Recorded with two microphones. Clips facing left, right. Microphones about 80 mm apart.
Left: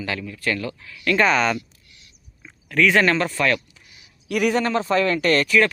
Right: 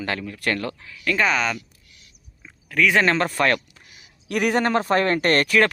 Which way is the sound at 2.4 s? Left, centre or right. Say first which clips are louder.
Left 2 dB; centre.